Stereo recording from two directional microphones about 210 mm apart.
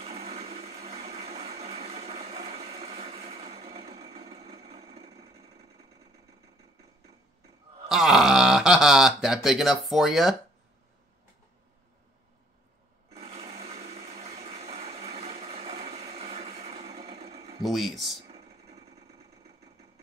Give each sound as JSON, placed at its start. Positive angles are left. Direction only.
{"t": 0.0, "sound": "blender", "side_deg": -30}
{"t": 7.9, "sound": "speech", "side_deg": 0}
{"t": 13.1, "sound": "blender", "side_deg": -30}
{"t": 17.6, "sound": "speech", "side_deg": 0}
{"t": 18.1, "sound": "a sound", "side_deg": -30}